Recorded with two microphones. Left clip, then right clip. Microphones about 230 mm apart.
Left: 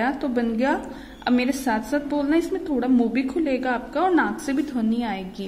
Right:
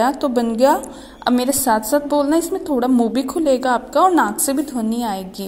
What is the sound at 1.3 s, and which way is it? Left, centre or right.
Speech, centre.